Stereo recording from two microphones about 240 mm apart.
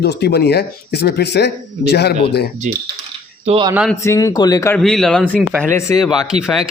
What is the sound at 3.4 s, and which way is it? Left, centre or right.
Speech, right.